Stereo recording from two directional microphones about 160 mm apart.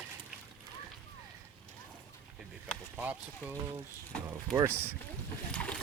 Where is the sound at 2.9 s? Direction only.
10° right (ahead or behind).